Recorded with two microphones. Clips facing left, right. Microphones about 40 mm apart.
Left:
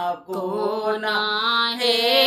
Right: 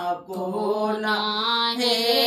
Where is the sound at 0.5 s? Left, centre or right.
Left.